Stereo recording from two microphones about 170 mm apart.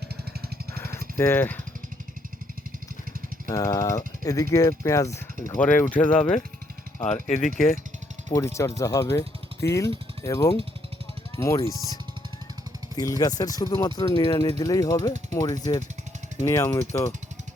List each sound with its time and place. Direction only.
0.8 s a sound: 15° left (ahead or behind)
3.5 s speech: 20° left (ahead or behind)
7.1 s speech: 45° left (ahead or behind)
8.3 s speech: 15° left (ahead or behind)
13.0 s speech: 20° left (ahead or behind)